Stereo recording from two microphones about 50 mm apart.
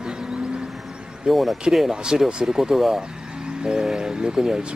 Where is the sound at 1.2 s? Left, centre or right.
Centre.